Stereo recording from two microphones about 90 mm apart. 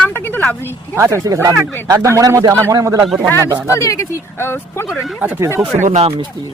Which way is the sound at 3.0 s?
5° right (ahead or behind).